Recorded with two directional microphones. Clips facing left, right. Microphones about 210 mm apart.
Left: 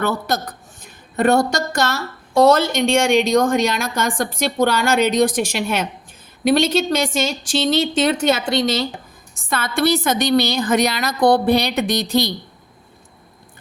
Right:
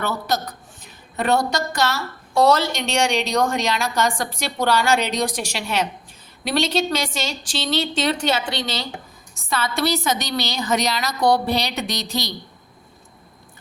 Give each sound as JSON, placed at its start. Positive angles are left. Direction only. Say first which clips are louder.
{"t": 0.0, "sound": "a woman's voice", "louder": "left 3 dB", "side_deg": 50}